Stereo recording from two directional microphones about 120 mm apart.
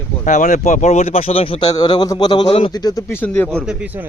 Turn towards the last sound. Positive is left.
turn(degrees=-15)  # may be behind; listen again after turning